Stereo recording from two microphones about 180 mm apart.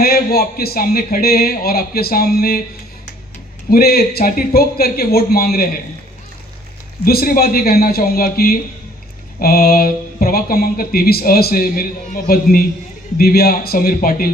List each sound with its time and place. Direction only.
0.0 s speech: 60° left (ahead or behind)
3.7 s speech: 60° left (ahead or behind)
7.0 s speech: 55° left (ahead or behind)